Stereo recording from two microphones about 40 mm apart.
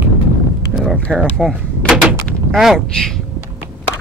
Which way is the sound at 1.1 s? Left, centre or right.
Right.